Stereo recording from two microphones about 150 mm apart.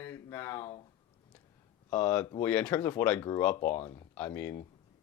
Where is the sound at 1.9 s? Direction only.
10° left (ahead or behind).